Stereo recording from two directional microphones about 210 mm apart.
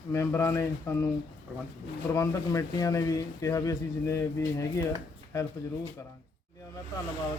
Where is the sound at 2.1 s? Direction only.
15° left (ahead or behind).